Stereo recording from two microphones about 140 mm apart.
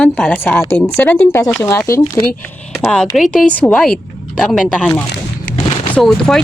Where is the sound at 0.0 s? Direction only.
10° left (ahead or behind).